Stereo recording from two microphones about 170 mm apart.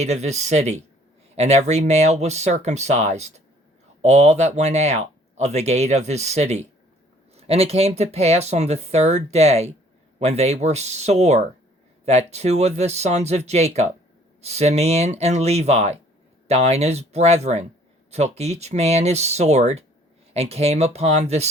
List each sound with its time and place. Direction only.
0.0 s speech: 40° right (ahead or behind)